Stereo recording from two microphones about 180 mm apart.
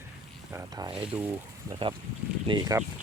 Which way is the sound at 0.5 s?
20° right (ahead or behind).